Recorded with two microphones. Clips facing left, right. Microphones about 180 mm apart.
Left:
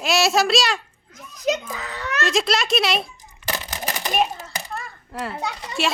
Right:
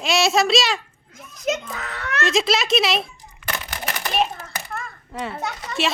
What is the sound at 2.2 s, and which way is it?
Speech, centre (ahead or behind).